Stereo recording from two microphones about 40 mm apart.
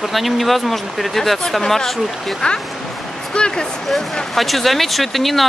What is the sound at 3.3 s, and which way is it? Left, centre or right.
Speech, left.